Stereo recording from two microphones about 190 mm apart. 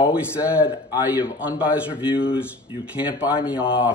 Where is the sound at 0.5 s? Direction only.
10° right (ahead or behind).